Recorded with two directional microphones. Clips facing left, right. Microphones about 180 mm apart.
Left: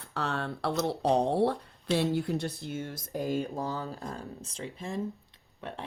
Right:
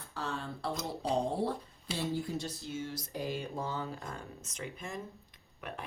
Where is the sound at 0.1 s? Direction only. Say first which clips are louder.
Left 6 dB; 70° left (ahead or behind).